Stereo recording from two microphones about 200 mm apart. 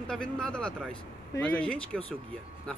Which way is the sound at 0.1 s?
5° left (ahead or behind).